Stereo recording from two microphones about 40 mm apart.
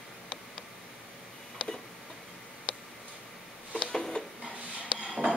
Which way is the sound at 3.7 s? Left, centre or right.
Centre.